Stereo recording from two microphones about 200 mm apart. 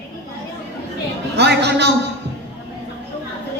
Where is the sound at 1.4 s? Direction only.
55° right (ahead or behind).